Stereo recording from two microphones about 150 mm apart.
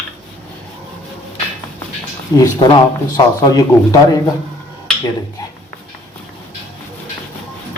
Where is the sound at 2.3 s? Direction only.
25° left (ahead or behind).